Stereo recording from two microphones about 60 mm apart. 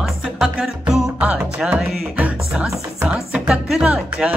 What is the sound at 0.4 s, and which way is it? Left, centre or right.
Music, centre.